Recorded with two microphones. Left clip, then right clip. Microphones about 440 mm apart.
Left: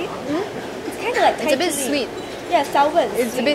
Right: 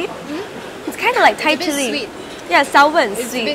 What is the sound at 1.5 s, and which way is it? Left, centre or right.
Speech, centre.